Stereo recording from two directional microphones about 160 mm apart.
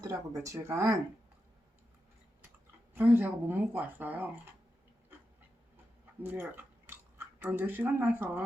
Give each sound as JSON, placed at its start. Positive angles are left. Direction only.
{"t": 0.0, "sound": "speech", "side_deg": -20}
{"t": 2.9, "sound": "a woman's voice", "side_deg": -10}
{"t": 6.2, "sound": "speech", "side_deg": -10}